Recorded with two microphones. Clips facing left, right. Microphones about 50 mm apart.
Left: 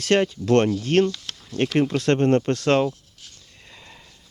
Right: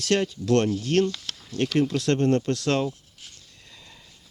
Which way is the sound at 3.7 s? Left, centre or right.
Left.